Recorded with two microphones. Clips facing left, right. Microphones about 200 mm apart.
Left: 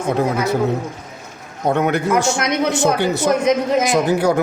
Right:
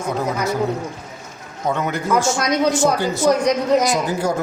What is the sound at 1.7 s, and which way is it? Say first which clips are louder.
Speech: left 3 dB; 60° left (ahead or behind).